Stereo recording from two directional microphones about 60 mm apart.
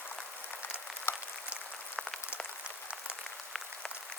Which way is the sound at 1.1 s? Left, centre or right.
Left.